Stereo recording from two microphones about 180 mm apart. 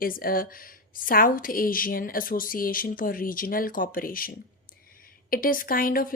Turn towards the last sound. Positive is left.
turn(degrees=50)  # may be behind; listen again after turning